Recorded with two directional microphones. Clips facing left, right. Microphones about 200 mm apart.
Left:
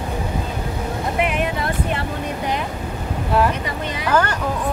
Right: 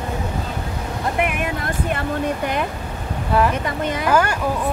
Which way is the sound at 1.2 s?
50° right (ahead or behind).